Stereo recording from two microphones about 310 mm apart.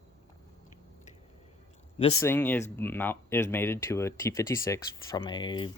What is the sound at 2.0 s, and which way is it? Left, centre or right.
Speech, centre.